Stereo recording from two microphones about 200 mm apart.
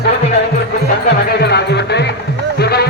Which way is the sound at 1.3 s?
55° left (ahead or behind).